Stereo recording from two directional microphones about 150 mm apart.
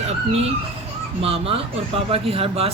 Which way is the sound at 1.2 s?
40° right (ahead or behind).